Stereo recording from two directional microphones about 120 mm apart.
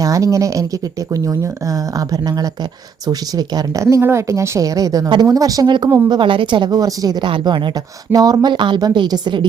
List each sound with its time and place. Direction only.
0.0 s speech: 30° right (ahead or behind)